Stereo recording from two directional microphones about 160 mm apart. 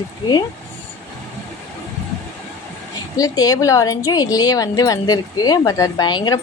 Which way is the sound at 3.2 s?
25° left (ahead or behind).